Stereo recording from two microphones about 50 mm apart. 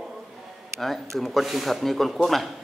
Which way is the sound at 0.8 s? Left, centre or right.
Centre.